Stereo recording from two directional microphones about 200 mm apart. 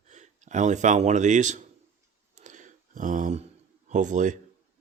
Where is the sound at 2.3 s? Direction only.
40° right (ahead or behind).